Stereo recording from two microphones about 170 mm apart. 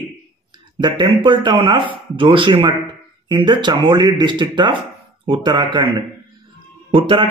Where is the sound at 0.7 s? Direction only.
25° right (ahead or behind).